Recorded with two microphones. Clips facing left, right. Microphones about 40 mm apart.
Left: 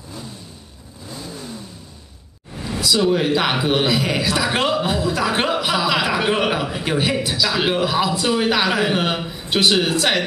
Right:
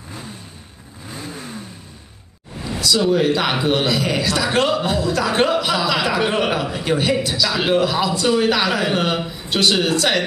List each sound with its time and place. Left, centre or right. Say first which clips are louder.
1.1 s vehicle: right 1 dB; right
2.8 s a man's voice: right 1 dB; centre